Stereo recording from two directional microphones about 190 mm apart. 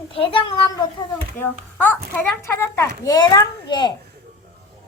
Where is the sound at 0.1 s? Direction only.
25° left (ahead or behind).